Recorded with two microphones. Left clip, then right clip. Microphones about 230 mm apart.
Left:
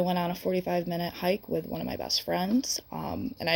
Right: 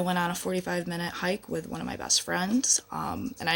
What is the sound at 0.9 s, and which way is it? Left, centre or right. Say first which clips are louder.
Speech: left 1 dB; right.